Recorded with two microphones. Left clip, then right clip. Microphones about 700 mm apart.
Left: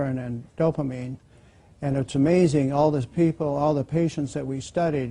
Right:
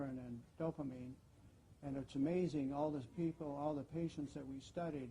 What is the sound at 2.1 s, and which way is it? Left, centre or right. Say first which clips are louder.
A man's voice: left 19 dB; left.